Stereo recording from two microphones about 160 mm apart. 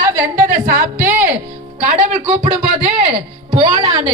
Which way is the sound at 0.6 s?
55° right (ahead or behind).